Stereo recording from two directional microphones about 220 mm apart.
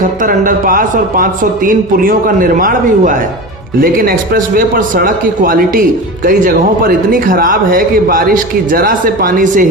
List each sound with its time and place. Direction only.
0.0 s a man's voice: 40° right (ahead or behind)